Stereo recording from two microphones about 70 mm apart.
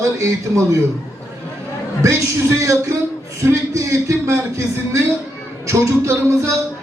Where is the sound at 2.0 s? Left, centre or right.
Right.